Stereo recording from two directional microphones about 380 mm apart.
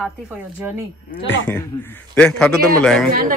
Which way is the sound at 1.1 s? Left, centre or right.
Left.